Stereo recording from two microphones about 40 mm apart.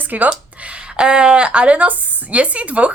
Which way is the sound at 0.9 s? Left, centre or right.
Right.